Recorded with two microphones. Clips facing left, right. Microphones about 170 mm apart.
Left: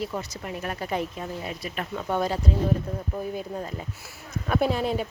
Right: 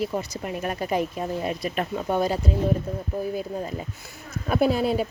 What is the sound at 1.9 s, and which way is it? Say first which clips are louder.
Speech: right 1 dB; 20° right (ahead or behind).